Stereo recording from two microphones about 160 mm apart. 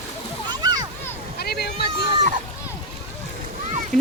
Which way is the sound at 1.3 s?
80° left.